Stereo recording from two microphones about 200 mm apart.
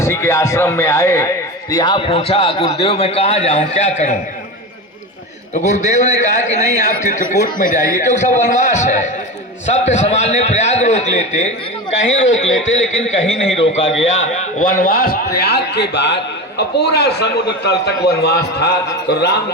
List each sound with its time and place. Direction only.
0.0 s a man's voice: 15° left (ahead or behind); by 4.2 s 35° left (ahead or behind)
5.5 s a man's voice: 35° left (ahead or behind)
11.9 s a man's voice: 65° left (ahead or behind)
14.6 s a man's voice: 45° left (ahead or behind)